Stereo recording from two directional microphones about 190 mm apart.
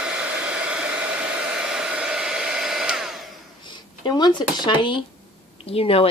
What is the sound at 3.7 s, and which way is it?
Speech, 25° left (ahead or behind).